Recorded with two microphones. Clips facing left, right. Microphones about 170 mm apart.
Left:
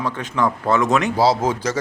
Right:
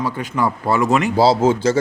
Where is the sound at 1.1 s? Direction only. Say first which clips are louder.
Right 3 dB; 30° right (ahead or behind).